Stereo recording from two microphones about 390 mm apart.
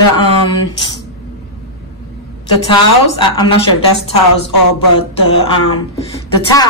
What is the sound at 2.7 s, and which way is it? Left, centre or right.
Speech, centre.